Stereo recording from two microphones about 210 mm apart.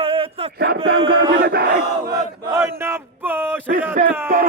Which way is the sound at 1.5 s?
45° right (ahead or behind).